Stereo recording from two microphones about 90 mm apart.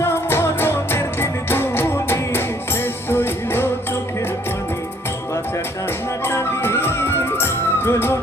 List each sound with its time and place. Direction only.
0.0 s music: 25° left (ahead or behind)
6.2 s music: 25° left (ahead or behind)